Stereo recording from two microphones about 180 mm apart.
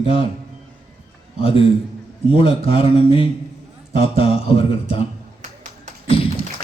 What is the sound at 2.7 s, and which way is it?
A man's voice, 30° left (ahead or behind).